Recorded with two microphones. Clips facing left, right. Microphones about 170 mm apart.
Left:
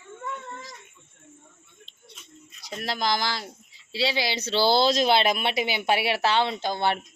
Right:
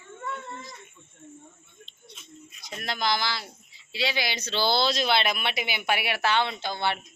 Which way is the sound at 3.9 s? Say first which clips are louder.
Left 3 dB; 30° left (ahead or behind).